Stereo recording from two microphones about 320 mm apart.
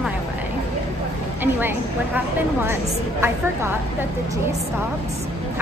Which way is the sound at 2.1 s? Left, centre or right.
Centre.